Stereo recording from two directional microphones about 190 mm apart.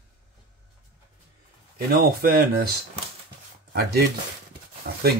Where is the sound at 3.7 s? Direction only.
55° right (ahead or behind).